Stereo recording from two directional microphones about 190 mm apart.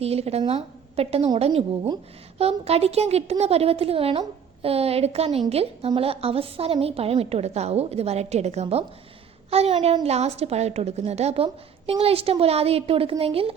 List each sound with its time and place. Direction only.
0.0 s a woman's voice: 35° right (ahead or behind)